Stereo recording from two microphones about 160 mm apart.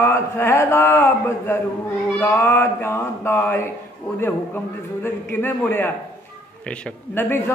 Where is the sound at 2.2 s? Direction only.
10° left (ahead or behind).